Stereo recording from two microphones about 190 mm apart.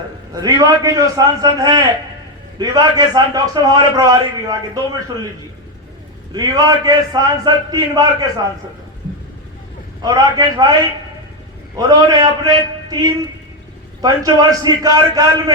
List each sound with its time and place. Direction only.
0.3 s a man's voice: 20° right (ahead or behind)
6.3 s a man's voice: 20° right (ahead or behind)
10.0 s a man's voice: 20° right (ahead or behind)
11.8 s a man's voice: 20° right (ahead or behind)